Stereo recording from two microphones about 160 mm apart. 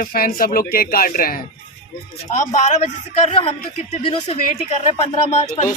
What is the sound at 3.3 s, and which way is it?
Speech, 40° left (ahead or behind).